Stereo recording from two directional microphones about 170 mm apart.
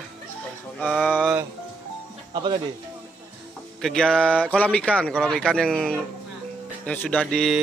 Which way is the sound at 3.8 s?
5° left (ahead or behind).